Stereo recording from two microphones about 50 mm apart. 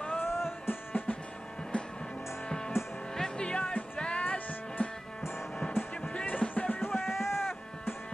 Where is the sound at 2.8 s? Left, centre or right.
Left.